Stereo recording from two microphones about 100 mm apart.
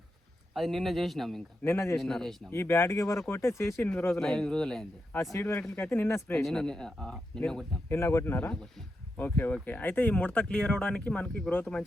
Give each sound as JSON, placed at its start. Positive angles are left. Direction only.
{"t": 0.5, "sound": "speech", "side_deg": 0}
{"t": 1.6, "sound": "speech", "side_deg": 25}
{"t": 2.0, "sound": "speech", "side_deg": 5}
{"t": 2.5, "sound": "speech", "side_deg": 25}
{"t": 4.2, "sound": "speech", "side_deg": 5}
{"t": 5.1, "sound": "speech", "side_deg": 30}
{"t": 5.4, "sound": "speech", "side_deg": 20}
{"t": 6.4, "sound": "speech", "side_deg": 5}
{"t": 7.9, "sound": "speech", "side_deg": 25}